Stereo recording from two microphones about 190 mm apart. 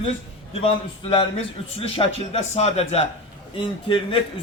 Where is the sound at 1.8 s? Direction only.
30° left (ahead or behind).